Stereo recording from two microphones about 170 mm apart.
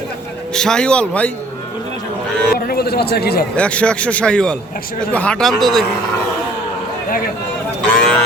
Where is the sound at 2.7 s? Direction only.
70° left (ahead or behind).